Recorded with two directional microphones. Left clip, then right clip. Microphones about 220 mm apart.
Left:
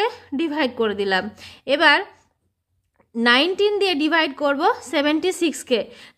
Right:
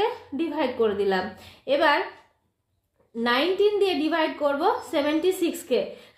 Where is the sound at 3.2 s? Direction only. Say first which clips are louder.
Left 5 dB; 35° left (ahead or behind).